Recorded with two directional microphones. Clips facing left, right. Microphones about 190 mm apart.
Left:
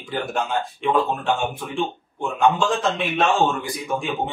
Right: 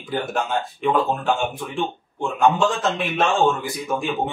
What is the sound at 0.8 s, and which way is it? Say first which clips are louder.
A man's voice: right 1 dB; centre (ahead or behind).